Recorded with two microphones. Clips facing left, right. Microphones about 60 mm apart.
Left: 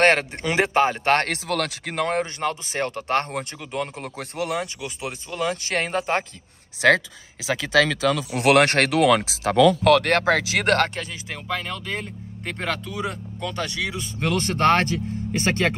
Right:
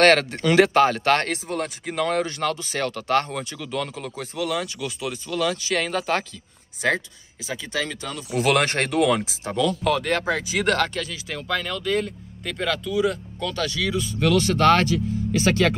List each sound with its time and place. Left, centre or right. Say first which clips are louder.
0.0 s speech: right 2 dB; left
1.3 s speech: left 2 dB; left
2.0 s speech: right 1 dB; left
3.5 s speech: right 3 dB; left
3.9 s a man's voice: right 1 dB; left
4.7 s speech: right 2 dB; left
5.6 s a man's voice: right 1 dB; left
5.9 s speech: even; left
7.4 s speech: left 8 dB; left
8.4 s speech: left 3 dB; left
10.6 s speech: right 2 dB; left
11.0 s a man's voice: right 2 dB; left